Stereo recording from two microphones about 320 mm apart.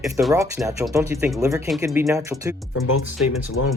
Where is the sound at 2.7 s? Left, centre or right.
Left.